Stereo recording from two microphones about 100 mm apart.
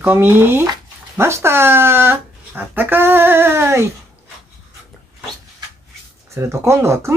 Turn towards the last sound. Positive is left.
turn(degrees=-30)  # may be behind; listen again after turning